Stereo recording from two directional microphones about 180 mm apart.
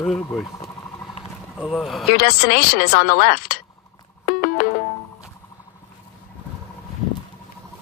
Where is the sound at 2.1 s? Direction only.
60° left (ahead or behind).